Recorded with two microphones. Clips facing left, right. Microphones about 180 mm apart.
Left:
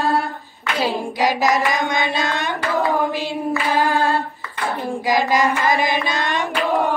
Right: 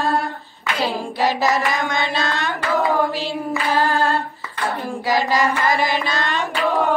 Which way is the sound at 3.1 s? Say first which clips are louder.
Left 2 dB; 15° left (ahead or behind).